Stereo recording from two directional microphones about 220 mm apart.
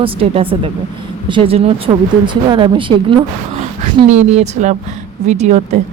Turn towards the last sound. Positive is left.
turn(degrees=-30)  # may be behind; listen again after turning